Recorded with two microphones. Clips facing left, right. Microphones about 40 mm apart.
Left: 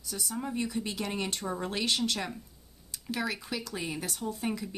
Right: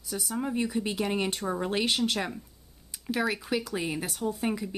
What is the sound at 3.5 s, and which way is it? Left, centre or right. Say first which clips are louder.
Speech: right 5 dB; centre.